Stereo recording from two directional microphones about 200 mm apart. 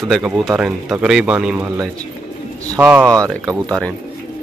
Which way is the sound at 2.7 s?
10° right (ahead or behind).